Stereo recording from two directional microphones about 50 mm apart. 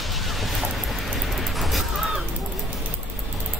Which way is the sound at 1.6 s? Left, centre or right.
Centre.